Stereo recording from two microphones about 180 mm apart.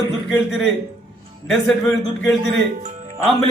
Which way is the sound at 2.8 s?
45° right (ahead or behind).